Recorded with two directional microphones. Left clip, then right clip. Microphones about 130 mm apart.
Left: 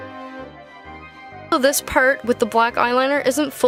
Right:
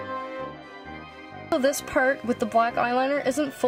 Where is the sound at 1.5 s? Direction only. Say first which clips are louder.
Left 6 dB; 55° left (ahead or behind).